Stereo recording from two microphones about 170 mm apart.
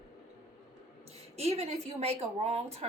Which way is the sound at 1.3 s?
35° right (ahead or behind).